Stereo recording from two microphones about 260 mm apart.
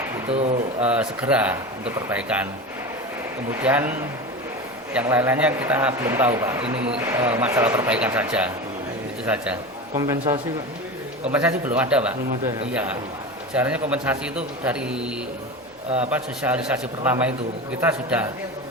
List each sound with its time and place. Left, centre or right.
0.3 s speech: right
0.9 s a man's voice: centre
3.5 s a man's voice: centre
4.9 s a man's voice: centre
13.5 s a man's voice: centre